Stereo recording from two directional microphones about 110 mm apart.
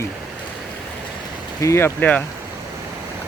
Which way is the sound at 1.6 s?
25° left (ahead or behind).